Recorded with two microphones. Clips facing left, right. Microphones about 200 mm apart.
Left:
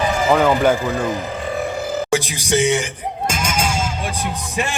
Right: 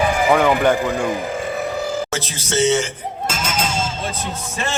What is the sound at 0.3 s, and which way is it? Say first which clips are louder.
Speech: left 2 dB; 5° left (ahead or behind).